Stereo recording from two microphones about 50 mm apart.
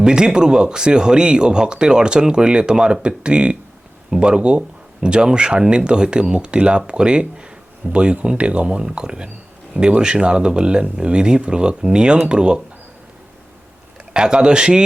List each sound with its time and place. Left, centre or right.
0.0 s speech: centre
14.1 s speech: centre